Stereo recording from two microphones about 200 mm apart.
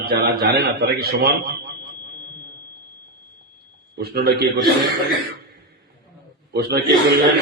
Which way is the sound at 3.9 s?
50° right (ahead or behind).